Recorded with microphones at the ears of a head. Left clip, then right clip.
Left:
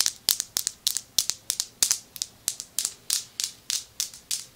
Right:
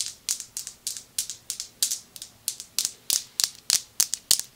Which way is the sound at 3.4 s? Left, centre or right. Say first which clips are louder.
Right 5 dB; right.